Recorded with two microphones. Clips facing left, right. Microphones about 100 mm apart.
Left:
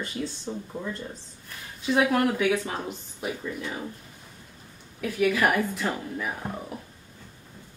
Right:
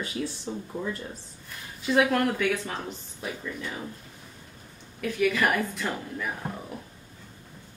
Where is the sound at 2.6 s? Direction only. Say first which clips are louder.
Left 2 dB; 20° left (ahead or behind).